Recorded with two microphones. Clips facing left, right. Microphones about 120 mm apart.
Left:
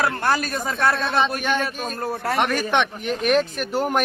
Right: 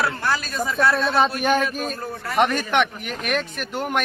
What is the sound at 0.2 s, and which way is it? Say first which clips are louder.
Speech: left 3 dB; 55° left (ahead or behind).